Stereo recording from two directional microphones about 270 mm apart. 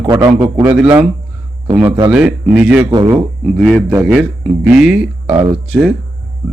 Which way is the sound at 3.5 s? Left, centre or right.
Centre.